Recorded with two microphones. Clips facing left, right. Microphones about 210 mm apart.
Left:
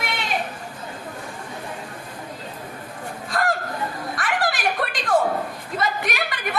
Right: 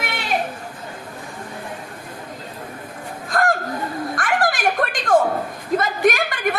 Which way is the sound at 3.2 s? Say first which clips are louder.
Right 4 dB; 45° right (ahead or behind).